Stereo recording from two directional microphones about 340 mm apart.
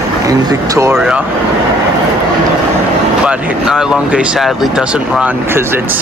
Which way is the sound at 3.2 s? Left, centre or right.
Centre.